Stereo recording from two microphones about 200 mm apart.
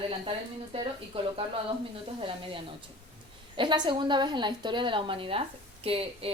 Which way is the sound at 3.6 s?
25° right (ahead or behind).